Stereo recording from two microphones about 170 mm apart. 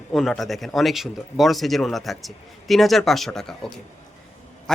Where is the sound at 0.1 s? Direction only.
Centre (ahead or behind).